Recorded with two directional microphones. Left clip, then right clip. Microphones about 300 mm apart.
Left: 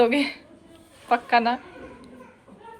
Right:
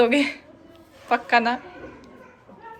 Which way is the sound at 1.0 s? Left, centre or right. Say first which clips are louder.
Right 1 dB; centre.